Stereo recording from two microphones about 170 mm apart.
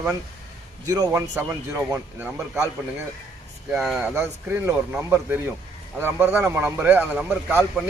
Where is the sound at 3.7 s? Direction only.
5° right (ahead or behind).